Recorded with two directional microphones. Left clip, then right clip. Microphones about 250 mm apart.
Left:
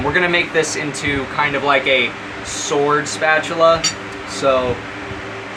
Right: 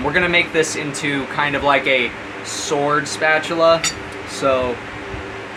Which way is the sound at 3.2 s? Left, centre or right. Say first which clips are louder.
Left 1 dB; centre.